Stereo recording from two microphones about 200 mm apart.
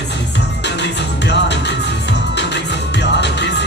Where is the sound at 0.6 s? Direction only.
60° left (ahead or behind).